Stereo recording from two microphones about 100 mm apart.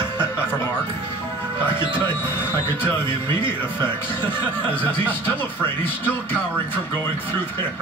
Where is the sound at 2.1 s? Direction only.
20° left (ahead or behind).